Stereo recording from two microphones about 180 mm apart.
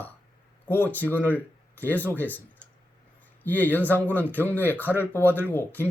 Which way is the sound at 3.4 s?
10° left (ahead or behind).